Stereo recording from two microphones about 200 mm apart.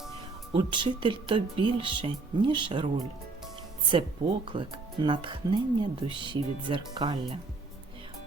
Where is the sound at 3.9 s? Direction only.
25° right (ahead or behind).